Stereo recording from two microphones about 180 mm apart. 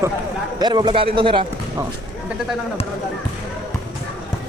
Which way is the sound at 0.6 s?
25° right (ahead or behind).